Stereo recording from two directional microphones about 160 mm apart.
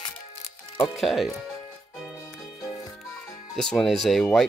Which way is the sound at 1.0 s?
Centre (ahead or behind).